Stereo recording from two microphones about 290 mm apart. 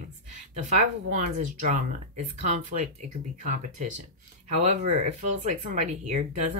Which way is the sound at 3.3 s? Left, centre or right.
Right.